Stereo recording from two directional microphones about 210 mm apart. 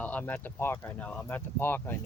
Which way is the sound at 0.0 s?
5° left (ahead or behind).